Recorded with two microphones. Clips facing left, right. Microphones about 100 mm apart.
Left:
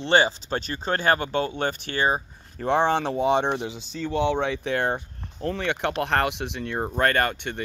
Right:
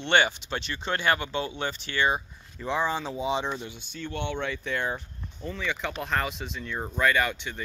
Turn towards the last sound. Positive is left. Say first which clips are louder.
# left 2 dB
turn(degrees=55)  # may be behind; listen again after turning